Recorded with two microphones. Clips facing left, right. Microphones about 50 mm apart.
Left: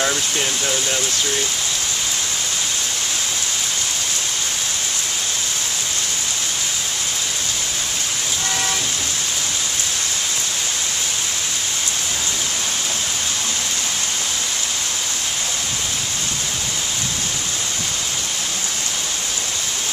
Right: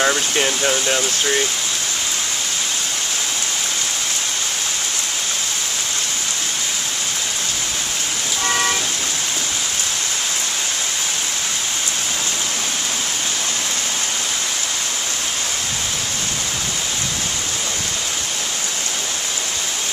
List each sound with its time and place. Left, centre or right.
0.0 s speech: right